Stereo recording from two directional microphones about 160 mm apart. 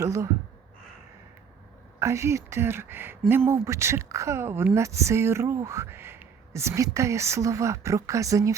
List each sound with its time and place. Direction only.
0.0 s speech: 20° right (ahead or behind)
2.0 s speech: 15° right (ahead or behind)